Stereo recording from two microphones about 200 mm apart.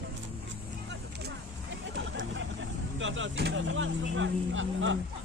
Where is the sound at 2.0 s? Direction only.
65° right (ahead or behind).